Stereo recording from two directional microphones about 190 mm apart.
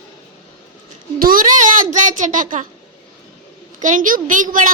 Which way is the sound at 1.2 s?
45° right (ahead or behind).